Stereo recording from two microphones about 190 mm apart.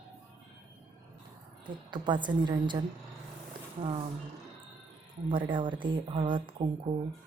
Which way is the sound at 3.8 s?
30° right (ahead or behind).